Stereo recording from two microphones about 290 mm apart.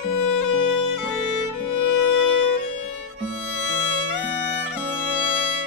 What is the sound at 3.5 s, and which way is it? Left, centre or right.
Music, right.